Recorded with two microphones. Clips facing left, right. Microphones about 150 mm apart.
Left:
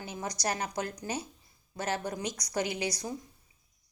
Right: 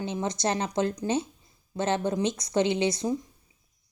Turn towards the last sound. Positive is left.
turn(degrees=-25)  # may be behind; listen again after turning